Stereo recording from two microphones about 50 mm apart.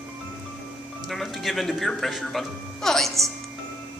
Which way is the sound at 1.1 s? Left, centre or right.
Centre.